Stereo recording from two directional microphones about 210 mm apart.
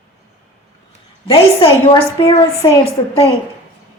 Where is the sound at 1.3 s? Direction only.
30° left (ahead or behind).